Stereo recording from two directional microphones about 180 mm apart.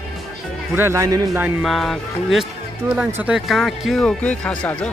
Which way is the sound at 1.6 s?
Centre (ahead or behind).